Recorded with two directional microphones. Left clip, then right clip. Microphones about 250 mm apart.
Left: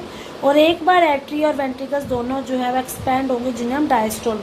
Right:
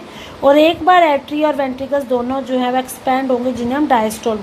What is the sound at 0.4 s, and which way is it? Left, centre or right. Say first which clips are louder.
A woman's voice: right 4 dB; right.